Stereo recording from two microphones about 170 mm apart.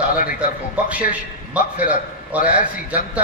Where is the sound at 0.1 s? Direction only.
55° left (ahead or behind).